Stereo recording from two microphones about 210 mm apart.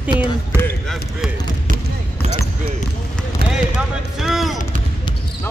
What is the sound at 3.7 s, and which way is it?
Basketball bounce, centre (ahead or behind).